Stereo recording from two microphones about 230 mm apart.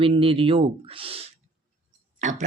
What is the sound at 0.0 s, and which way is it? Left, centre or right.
Speech, right.